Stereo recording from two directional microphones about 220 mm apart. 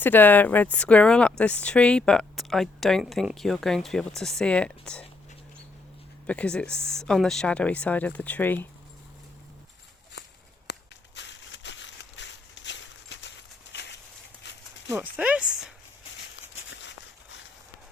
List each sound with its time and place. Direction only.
0.0 s speech: 10° left (ahead or behind)
6.2 s speech: 5° left (ahead or behind)
10.7 s a sound: 55° left (ahead or behind)
14.4 s horse: 50° left (ahead or behind)
15.1 s speech: 5° right (ahead or behind)